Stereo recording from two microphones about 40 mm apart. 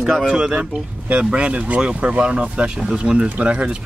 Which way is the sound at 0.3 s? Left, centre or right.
Right.